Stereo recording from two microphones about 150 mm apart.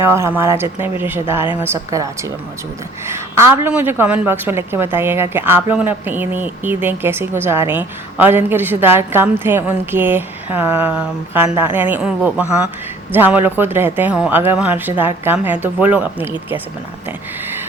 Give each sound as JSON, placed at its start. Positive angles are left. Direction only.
{"t": 0.0, "sound": "a woman's voice", "side_deg": -15}
{"t": 3.1, "sound": "a woman's voice", "side_deg": -15}